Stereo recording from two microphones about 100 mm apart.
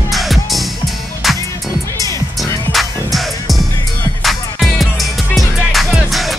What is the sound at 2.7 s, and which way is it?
Music, centre (ahead or behind).